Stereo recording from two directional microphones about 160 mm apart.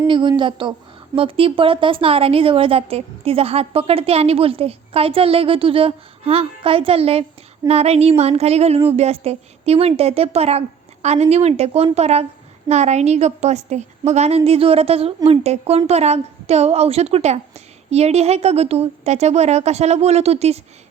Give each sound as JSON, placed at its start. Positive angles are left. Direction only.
{"t": 0.1, "sound": "a woman's voice", "side_deg": -30}